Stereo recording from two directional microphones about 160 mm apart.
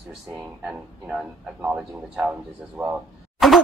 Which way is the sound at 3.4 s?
Centre (ahead or behind).